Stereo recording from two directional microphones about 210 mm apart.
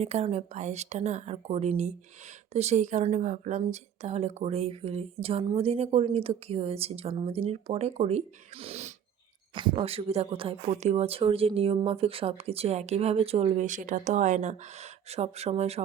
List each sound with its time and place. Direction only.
0.0 s a woman's voice: 30° right (ahead or behind)